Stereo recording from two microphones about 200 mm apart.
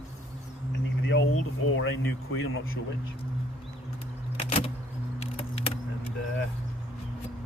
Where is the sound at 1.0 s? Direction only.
75° left (ahead or behind).